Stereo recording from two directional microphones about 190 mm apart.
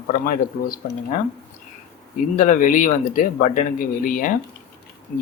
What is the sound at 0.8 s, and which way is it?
Speech, 50° left (ahead or behind).